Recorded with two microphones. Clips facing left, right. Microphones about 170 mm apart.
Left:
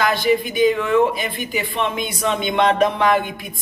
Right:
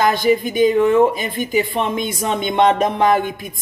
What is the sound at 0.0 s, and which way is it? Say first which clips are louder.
Speech: right 2 dB; 45° right (ahead or behind).